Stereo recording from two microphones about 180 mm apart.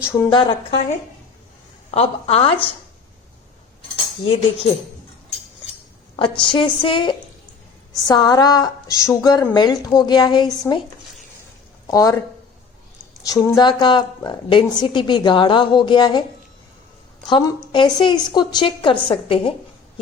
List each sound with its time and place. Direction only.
0.3 s a woman's voice: 25° left (ahead or behind)
1.9 s a woman's voice: 35° left (ahead or behind)
3.9 s speech: 30° left (ahead or behind)
6.1 s a woman's voice: 25° left (ahead or behind)
11.9 s a woman's voice: 20° left (ahead or behind)
13.2 s a woman's voice: 20° left (ahead or behind)
17.2 s a woman's voice: 25° left (ahead or behind)